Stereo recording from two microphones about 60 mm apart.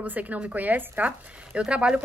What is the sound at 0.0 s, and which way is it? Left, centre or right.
A woman's voice, right.